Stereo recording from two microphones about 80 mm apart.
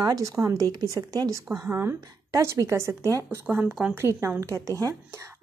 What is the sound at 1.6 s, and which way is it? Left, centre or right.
A woman's voice, right.